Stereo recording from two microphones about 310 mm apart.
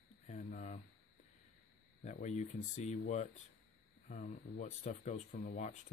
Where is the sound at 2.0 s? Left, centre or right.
Left.